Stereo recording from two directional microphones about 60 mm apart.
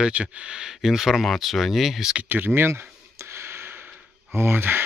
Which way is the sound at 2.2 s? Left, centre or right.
Right.